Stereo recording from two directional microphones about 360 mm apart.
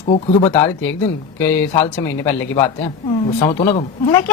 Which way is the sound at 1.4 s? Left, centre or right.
Centre.